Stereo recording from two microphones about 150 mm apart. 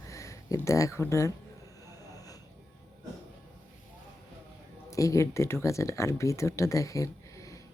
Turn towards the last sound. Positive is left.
turn(degrees=20)  # may be behind; listen again after turning